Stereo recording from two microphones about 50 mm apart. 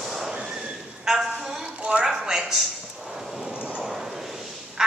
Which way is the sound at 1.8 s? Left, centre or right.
Right.